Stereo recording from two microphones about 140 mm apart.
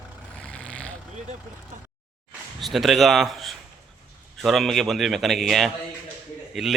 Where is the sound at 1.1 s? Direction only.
55° right (ahead or behind).